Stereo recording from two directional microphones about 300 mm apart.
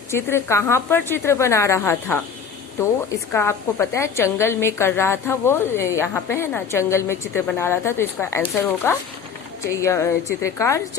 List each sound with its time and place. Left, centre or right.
0.1 s a woman's voice: centre
3.3 s a woman's voice: centre